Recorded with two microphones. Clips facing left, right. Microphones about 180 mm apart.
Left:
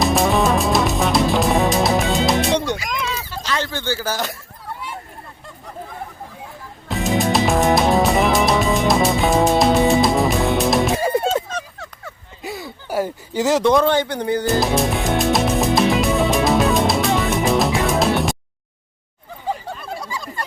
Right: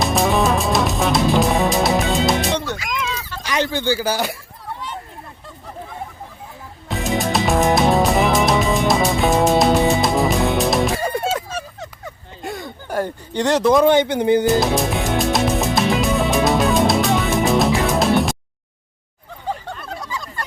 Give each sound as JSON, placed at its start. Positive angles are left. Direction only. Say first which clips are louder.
{"t": 0.0, "sound": "music", "louder": "left 1 dB", "side_deg": 0}
{"t": 2.6, "sound": "music", "louder": "left 3 dB", "side_deg": 15}
{"t": 2.9, "sound": "a sound", "louder": "even", "side_deg": 0}
{"t": 3.4, "sound": "speech", "louder": "right 4 dB", "side_deg": -15}
{"t": 6.8, "sound": "music", "louder": "left 2 dB", "side_deg": 0}
{"t": 12.4, "sound": "a sound", "louder": "right 1 dB", "side_deg": 5}
{"t": 13.8, "sound": "a man's voice", "louder": "right 4 dB", "side_deg": -20}
{"t": 14.6, "sound": "music", "louder": "even", "side_deg": 0}
{"t": 19.5, "sound": "a sound", "louder": "left 1 dB", "side_deg": 5}